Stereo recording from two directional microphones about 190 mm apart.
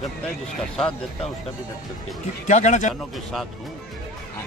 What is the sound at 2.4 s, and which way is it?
Speech, 40° left (ahead or behind).